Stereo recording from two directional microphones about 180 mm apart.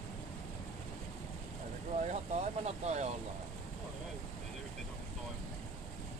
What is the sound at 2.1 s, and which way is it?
Vehicle, 40° right (ahead or behind).